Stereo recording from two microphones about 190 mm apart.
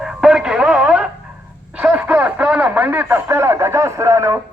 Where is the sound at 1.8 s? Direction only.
5° right (ahead or behind).